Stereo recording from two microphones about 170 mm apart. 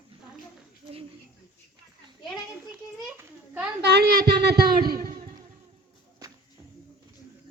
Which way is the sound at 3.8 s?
70° right (ahead or behind).